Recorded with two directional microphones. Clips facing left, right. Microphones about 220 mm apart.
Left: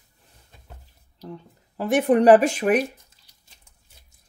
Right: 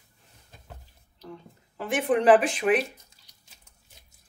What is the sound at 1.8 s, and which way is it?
Speech, 40° left (ahead or behind).